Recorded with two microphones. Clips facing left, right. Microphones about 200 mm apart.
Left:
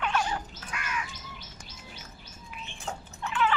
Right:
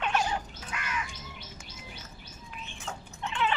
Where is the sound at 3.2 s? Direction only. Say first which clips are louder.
Left 2 dB; 25° right (ahead or behind).